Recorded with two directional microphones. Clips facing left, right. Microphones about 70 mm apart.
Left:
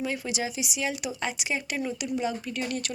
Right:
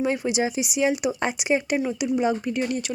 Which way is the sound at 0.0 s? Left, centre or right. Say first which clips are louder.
Right 7 dB; right.